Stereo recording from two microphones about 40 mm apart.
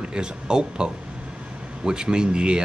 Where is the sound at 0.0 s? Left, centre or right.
Right.